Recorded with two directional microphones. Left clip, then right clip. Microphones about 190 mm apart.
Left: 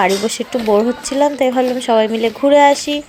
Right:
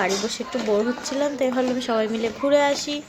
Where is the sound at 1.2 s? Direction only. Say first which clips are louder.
Left 9 dB; 30° left (ahead or behind).